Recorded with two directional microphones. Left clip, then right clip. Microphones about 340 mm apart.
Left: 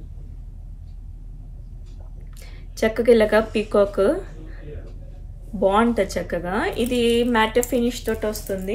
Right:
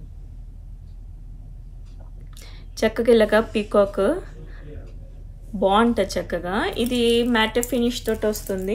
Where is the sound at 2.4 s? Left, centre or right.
Centre.